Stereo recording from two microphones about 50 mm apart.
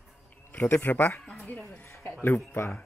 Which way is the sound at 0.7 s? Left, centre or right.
Left.